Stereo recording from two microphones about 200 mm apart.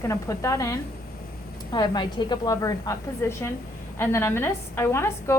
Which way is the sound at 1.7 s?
20° left (ahead or behind).